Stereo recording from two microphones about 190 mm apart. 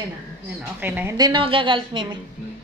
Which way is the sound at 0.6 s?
10° right (ahead or behind).